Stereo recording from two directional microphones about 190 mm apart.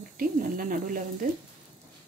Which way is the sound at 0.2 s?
45° right (ahead or behind).